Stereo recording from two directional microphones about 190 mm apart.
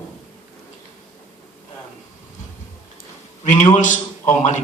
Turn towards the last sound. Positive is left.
turn(degrees=40)  # may be behind; listen again after turning